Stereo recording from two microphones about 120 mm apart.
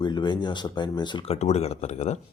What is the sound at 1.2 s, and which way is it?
Speech, 60° left (ahead or behind).